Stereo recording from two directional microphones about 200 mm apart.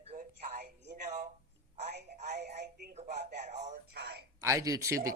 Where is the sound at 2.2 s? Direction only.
35° right (ahead or behind).